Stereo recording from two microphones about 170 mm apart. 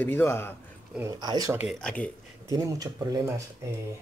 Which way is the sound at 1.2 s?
20° right (ahead or behind).